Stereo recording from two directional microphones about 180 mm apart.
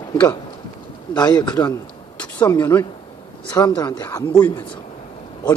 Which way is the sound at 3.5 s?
20° left (ahead or behind).